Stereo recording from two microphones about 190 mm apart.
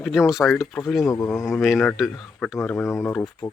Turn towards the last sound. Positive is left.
turn(degrees=5)  # may be behind; listen again after turning